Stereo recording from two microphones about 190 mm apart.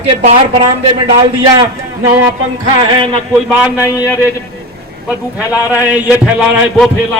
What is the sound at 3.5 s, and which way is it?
Speech, 5° right (ahead or behind).